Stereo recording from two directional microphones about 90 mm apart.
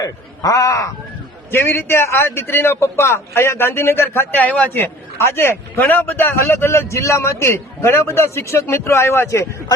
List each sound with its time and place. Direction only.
0.0 s speech: 40° left (ahead or behind)
1.5 s a man's voice: 25° left (ahead or behind)